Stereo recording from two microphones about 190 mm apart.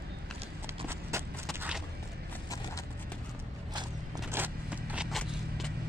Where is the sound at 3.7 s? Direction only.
15° right (ahead or behind).